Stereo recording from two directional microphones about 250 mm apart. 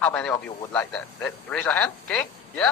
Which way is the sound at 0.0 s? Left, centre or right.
Centre.